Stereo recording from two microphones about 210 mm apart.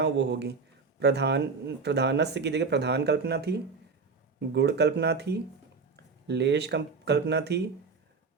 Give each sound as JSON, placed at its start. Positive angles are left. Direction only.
{"t": 0.0, "sound": "speech", "side_deg": -55}